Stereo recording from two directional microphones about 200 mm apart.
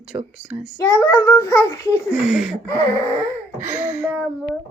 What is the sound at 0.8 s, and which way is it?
A child's voice, 15° left (ahead or behind).